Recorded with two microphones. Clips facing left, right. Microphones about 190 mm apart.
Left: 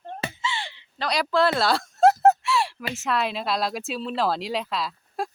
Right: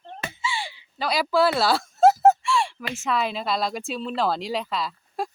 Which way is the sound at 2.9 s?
Centre (ahead or behind).